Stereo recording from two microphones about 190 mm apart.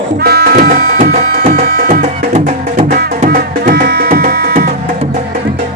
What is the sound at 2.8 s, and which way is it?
Music, 55° right (ahead or behind).